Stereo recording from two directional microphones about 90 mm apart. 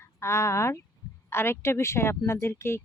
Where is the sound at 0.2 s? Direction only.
30° left (ahead or behind).